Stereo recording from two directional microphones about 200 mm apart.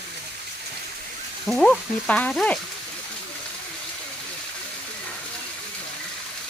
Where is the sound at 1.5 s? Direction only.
Centre (ahead or behind).